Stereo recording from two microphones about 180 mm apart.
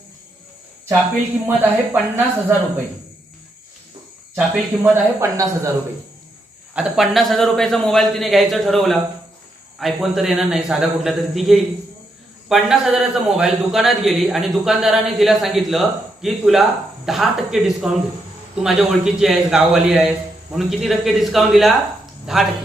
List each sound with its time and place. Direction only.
1.5 s speech: 10° right (ahead or behind)
4.4 s speech: 15° right (ahead or behind)
6.7 s a man's voice: centre (ahead or behind)